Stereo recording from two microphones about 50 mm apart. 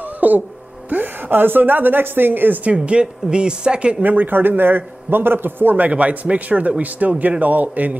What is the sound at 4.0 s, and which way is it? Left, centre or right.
A man's voice, right.